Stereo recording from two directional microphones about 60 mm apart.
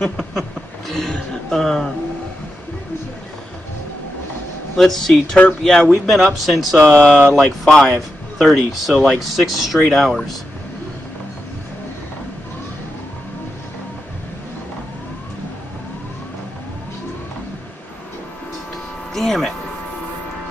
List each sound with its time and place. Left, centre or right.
0.2 s a sound: centre
4.7 s speech: centre
6.0 s speech: centre
6.8 s speech: centre
7.3 s speech: centre
19.1 s a sound: centre